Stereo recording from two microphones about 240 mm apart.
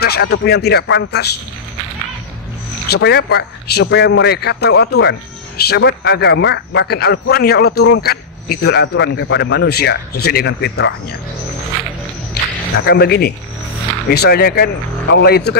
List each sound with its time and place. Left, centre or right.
0.0 s a man's voice: left
2.9 s a man's voice: left
12.7 s speech: left